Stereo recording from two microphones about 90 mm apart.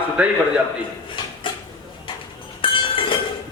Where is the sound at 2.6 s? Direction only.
70° left (ahead or behind).